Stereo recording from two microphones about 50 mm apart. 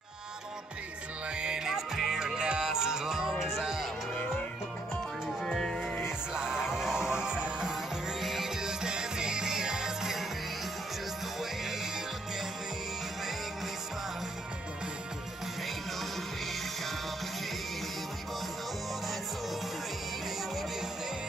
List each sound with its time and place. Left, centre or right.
1.3 s music: centre
2.1 s music: centre
2.6 s music: centre
5.4 s music: centre
6.0 s music: centre
7.7 s music: centre